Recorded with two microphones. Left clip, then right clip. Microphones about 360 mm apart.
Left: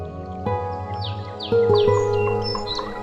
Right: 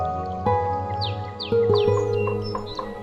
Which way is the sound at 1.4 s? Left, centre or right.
Centre.